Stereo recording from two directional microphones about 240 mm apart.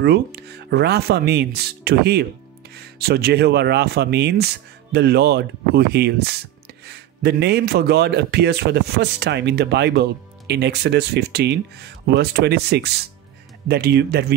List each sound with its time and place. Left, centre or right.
0.0 s speech: right